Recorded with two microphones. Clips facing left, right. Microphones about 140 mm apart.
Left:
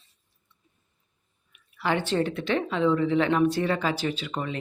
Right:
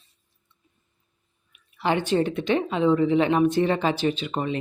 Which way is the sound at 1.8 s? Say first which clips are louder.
Right 3 dB; 20° right (ahead or behind).